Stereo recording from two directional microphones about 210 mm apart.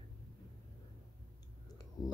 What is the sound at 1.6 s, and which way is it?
Clicking, 20° left (ahead or behind).